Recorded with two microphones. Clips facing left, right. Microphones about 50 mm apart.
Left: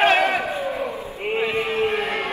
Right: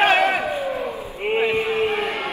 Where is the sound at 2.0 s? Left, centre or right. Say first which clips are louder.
Even; left.